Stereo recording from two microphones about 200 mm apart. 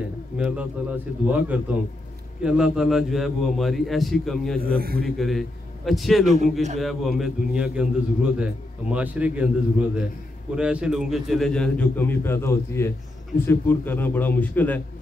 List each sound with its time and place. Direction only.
0.4 s a man's voice: 5° right (ahead or behind)
4.6 s a man's voice: 50° right (ahead or behind)
5.0 s a man's voice: centre (ahead or behind)
6.2 s a man's voice: 35° right (ahead or behind)
6.8 s a man's voice: centre (ahead or behind)